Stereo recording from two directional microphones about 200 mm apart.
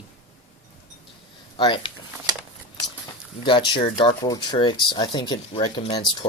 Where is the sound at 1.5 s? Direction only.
25° left (ahead or behind).